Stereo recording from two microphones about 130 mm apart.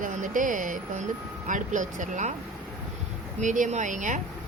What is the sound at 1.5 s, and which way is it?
Speech, 80° right.